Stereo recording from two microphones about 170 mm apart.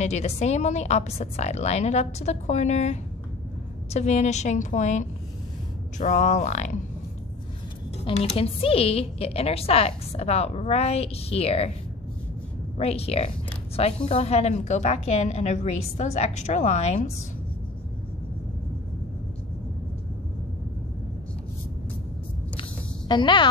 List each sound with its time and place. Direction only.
0.0 s a woman's voice: 40° left (ahead or behind)
8.0 s a woman's voice: 35° left (ahead or behind)
12.7 s a woman's voice: 35° left (ahead or behind)
22.6 s a sound: 25° left (ahead or behind)